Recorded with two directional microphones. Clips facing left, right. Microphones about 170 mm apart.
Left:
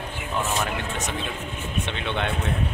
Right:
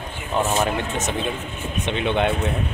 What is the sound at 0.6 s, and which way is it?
Speech, 25° right (ahead or behind).